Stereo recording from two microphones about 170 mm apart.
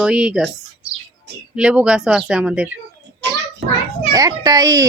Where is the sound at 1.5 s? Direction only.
5° right (ahead or behind).